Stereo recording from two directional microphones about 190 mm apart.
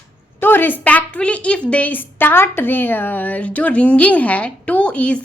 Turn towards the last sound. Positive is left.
turn(degrees=5)  # may be behind; listen again after turning